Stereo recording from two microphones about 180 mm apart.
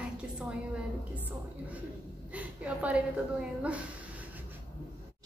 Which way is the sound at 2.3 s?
5° right (ahead or behind).